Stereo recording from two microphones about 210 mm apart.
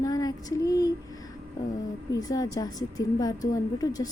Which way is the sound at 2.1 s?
15° left (ahead or behind).